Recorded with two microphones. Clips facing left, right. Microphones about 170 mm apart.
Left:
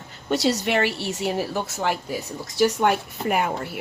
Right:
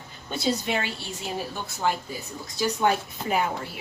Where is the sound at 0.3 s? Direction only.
75° left (ahead or behind).